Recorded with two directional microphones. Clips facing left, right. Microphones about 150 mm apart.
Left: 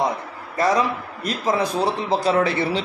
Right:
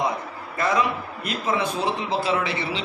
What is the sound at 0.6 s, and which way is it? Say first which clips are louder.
A man's voice: left 3 dB; 35° left (ahead or behind).